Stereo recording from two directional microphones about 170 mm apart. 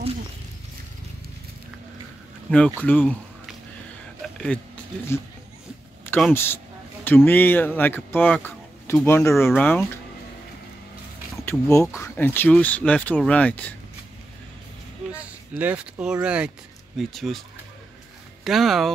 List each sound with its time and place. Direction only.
2.8 s speech: 10° left (ahead or behind)
4.5 s speech: 10° left (ahead or behind)
6.0 s speech: 10° left (ahead or behind)
11.4 s speech: 10° left (ahead or behind)
15.5 s speech: 10° right (ahead or behind)
18.4 s speech: centre (ahead or behind)